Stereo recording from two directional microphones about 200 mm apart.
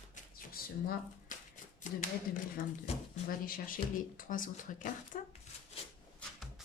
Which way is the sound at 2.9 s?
30° left (ahead or behind).